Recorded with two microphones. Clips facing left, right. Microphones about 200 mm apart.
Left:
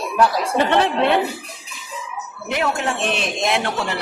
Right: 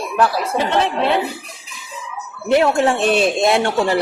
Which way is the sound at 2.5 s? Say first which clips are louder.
Right 8 dB; 35° right (ahead or behind).